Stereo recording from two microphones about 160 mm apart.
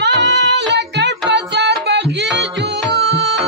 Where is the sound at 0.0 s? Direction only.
90° right.